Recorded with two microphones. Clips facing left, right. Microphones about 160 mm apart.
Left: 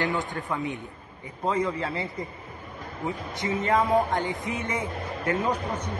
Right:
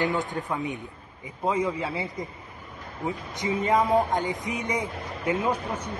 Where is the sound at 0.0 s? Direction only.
20° right (ahead or behind).